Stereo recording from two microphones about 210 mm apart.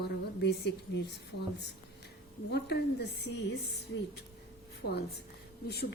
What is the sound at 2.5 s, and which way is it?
A woman's voice, 50° left (ahead or behind).